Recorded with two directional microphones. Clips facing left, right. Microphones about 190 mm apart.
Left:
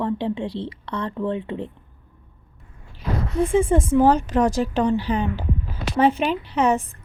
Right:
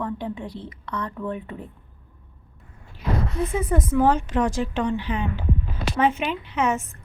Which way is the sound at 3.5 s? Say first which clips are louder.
Left 5 dB; 25° left (ahead or behind).